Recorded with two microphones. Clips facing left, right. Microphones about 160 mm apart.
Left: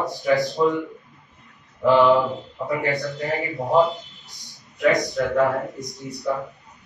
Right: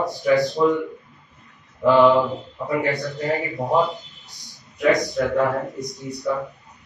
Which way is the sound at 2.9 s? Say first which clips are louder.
Right 1 dB; centre (ahead or behind).